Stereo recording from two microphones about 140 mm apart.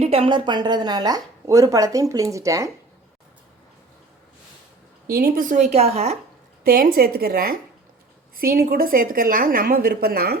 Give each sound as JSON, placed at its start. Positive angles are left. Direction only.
{"t": 0.0, "sound": "speech", "side_deg": -45}
{"t": 5.0, "sound": "a woman's voice", "side_deg": -90}
{"t": 6.7, "sound": "a woman's voice", "side_deg": -90}